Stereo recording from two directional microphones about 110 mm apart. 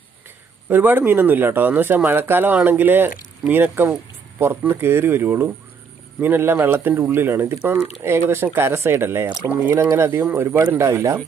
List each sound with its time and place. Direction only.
0.7 s speech: 15° right (ahead or behind)